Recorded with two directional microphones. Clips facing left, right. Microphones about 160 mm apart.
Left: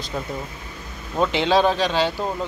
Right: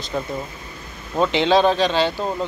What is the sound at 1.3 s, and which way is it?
Speech, 5° left (ahead or behind).